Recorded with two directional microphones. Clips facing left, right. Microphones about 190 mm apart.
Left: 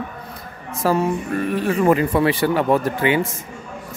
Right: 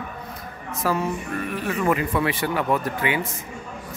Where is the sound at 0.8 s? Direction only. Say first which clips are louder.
Left 6 dB; 30° left (ahead or behind).